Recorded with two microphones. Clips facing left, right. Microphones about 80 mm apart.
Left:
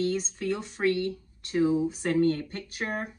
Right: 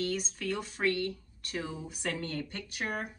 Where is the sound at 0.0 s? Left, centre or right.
Left.